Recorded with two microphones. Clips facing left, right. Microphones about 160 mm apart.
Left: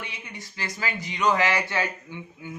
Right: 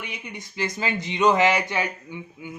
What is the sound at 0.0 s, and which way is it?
Speech, 20° right (ahead or behind).